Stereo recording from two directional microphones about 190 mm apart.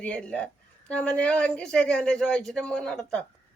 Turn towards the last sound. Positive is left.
turn(degrees=5)  # may be behind; listen again after turning